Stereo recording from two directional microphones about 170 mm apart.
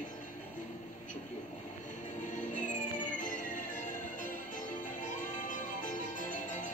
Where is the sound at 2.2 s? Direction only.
45° left (ahead or behind).